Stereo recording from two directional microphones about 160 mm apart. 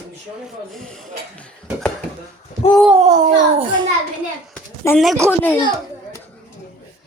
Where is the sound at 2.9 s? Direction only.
45° right (ahead or behind).